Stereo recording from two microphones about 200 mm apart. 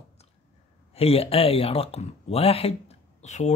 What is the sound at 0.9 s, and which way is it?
Speech, 30° left (ahead or behind).